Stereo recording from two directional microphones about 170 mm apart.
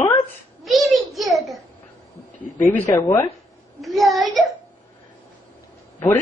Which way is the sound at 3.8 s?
Centre (ahead or behind).